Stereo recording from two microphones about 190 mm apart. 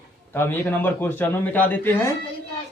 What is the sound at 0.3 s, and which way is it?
A man's voice, 10° left (ahead or behind).